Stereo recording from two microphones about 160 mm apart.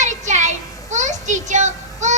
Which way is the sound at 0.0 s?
50° right (ahead or behind).